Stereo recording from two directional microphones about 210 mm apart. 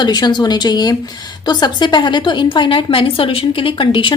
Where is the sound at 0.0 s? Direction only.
20° left (ahead or behind).